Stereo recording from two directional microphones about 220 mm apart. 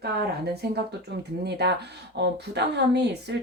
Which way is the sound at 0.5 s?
50° right (ahead or behind).